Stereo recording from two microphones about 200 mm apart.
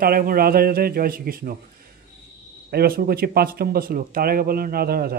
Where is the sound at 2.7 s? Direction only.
50° right (ahead or behind).